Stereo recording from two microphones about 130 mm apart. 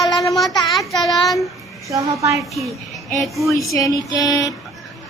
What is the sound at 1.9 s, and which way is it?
Speech, 25° right (ahead or behind).